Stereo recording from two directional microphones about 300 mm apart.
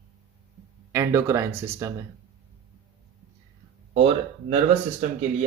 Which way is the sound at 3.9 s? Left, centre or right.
Centre.